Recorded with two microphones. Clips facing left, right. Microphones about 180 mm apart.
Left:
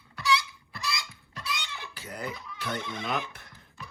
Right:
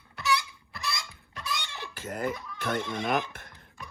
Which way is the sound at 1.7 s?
50° right (ahead or behind).